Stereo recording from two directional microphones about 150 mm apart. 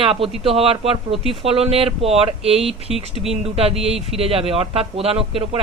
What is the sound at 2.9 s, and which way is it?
Speech, centre (ahead or behind).